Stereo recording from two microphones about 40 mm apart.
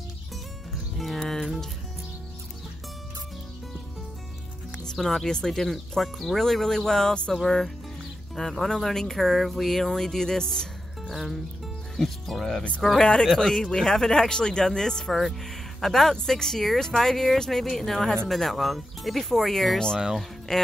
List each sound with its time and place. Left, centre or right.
0.9 s music: centre
4.9 s speech: centre
11.1 s speech: centre
13.0 s speech: centre
13.3 s speech: centre
13.6 s speech: centre
15.1 s speech: centre